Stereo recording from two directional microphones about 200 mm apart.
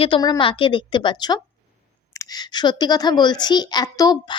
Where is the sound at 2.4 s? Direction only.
20° left (ahead or behind).